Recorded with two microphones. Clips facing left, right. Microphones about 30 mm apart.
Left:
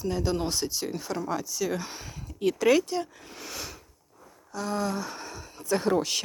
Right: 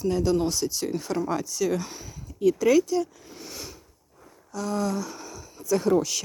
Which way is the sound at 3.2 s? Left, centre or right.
Left.